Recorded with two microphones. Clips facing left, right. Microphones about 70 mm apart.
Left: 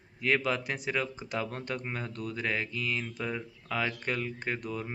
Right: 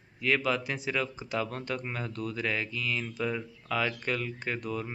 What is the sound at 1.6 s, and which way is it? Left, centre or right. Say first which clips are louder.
Speech: right 1 dB; left.